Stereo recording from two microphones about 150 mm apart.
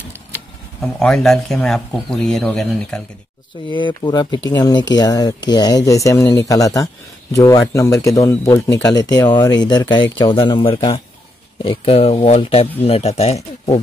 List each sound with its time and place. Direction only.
0.9 s speech: 5° left (ahead or behind)
3.7 s speech: 30° left (ahead or behind)